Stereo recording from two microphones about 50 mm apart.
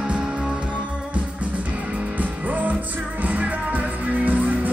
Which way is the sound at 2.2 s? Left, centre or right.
Right.